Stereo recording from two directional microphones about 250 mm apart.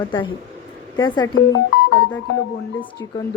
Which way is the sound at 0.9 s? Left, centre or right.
Centre.